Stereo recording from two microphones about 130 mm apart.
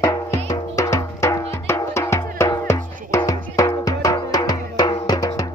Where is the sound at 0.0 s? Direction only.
25° left (ahead or behind).